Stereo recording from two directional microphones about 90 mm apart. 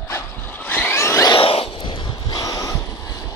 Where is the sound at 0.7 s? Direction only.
25° left (ahead or behind).